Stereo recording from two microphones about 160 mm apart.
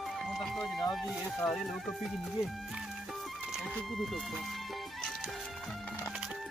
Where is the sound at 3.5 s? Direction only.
Centre (ahead or behind).